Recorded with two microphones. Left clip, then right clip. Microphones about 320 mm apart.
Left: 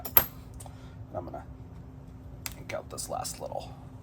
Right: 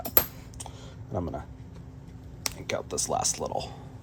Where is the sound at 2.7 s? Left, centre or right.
Right.